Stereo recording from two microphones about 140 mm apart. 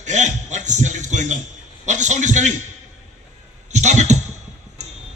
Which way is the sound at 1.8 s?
60° right (ahead or behind).